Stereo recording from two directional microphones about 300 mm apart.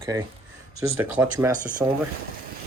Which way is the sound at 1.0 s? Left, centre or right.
Centre.